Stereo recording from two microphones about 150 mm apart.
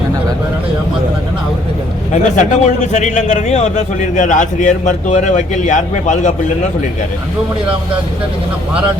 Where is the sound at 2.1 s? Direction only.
55° left (ahead or behind).